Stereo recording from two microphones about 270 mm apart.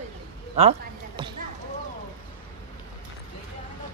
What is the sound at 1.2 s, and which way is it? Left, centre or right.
Basketball bounce, centre.